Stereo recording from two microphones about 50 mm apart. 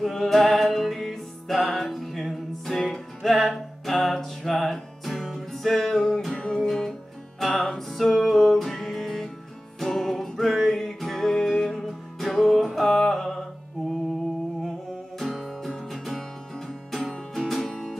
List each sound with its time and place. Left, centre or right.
0.0 s music: centre
6.3 s music: left
6.6 s music: centre
15.1 s music: centre